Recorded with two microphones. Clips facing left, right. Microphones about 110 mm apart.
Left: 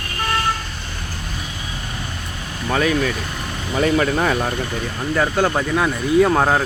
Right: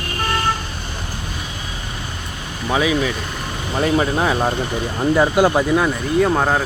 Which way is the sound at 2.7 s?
10° right (ahead or behind).